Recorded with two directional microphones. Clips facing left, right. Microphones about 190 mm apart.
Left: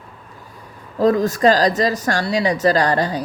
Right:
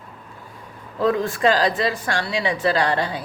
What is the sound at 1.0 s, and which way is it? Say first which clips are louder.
Speech: left 5 dB; 40° left (ahead or behind).